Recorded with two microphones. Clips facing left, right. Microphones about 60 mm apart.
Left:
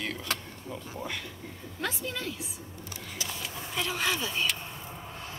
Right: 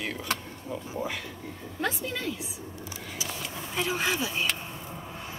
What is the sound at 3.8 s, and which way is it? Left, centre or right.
Speech, centre.